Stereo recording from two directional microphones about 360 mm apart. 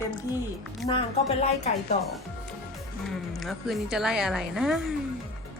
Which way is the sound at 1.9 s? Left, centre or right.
Centre.